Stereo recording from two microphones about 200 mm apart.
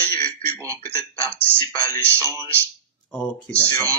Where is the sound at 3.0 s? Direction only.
5° left (ahead or behind).